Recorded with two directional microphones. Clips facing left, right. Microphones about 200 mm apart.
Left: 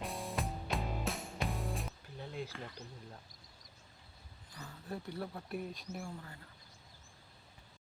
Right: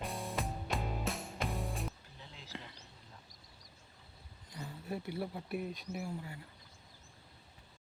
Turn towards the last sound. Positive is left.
turn(degrees=-10)  # may be behind; listen again after turning